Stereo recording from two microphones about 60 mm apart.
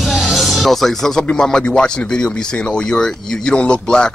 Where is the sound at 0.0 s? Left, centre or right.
Centre.